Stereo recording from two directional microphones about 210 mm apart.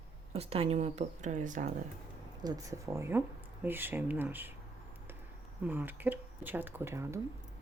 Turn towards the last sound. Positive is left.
turn(degrees=-15)  # may be behind; listen again after turning